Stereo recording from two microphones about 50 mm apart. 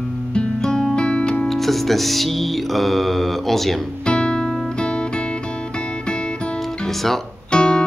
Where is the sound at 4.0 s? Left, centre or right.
Centre.